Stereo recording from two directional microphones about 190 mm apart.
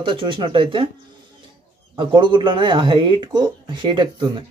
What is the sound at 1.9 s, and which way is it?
Speech, 25° right (ahead or behind).